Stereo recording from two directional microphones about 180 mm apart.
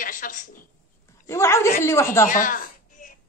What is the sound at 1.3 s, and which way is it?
Speech, 15° left (ahead or behind).